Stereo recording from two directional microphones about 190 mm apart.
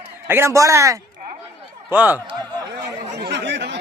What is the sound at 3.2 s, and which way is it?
Chatter, 65° right (ahead or behind).